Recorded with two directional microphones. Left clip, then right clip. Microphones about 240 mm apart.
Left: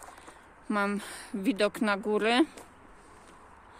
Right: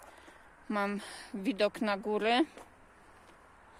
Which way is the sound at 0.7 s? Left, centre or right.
Centre.